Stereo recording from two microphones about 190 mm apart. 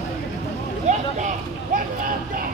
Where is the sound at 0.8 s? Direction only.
40° right (ahead or behind).